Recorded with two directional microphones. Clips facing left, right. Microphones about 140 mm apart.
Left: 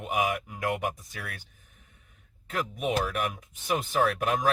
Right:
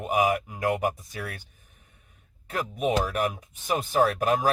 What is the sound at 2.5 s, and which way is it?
Speech, 35° right (ahead or behind).